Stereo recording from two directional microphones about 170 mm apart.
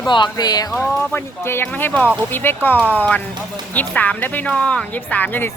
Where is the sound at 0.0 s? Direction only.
25° left (ahead or behind).